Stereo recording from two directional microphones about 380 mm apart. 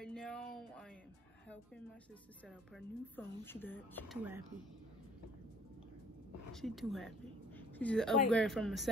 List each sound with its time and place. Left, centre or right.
0.0 s a sound: centre
2.4 s a woman's voice: centre
6.5 s a woman's voice: centre